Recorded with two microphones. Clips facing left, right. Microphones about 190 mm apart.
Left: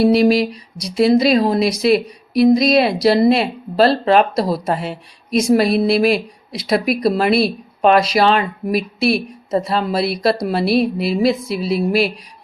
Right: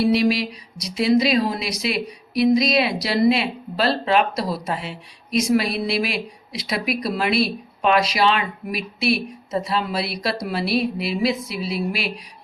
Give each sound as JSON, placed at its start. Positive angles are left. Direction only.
{"t": 0.0, "sound": "a woman's voice", "side_deg": 45}